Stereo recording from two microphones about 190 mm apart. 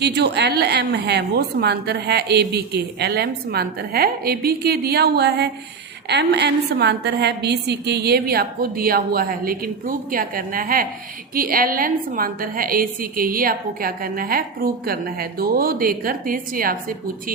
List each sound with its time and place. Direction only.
0.0 s a woman's voice: 60° right (ahead or behind)